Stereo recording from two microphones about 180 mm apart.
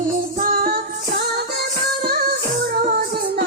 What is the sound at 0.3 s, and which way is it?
Music, 55° right (ahead or behind).